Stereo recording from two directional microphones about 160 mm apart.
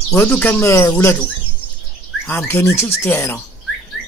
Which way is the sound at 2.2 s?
15° left (ahead or behind).